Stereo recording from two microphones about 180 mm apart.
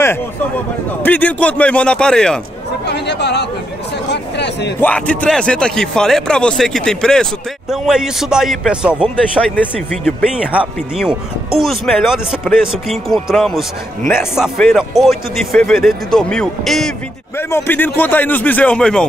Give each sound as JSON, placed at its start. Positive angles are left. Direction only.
{"t": 1.0, "sound": "a man's voice", "side_deg": 10}
{"t": 2.9, "sound": "speech", "side_deg": 70}
{"t": 4.1, "sound": "a sound", "side_deg": 70}
{"t": 4.7, "sound": "speech", "side_deg": 10}
{"t": 9.1, "sound": "a man's voice", "side_deg": 10}
{"t": 10.3, "sound": "speech", "side_deg": -5}
{"t": 17.4, "sound": "a man's voice", "side_deg": 10}